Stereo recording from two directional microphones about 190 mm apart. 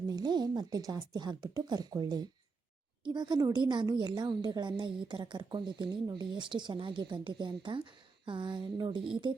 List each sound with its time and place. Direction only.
0.1 s a woman's voice: 20° right (ahead or behind)